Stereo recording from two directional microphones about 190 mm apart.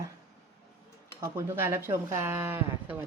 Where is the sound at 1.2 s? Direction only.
15° right (ahead or behind).